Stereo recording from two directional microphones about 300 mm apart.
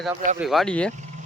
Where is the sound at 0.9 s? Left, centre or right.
Right.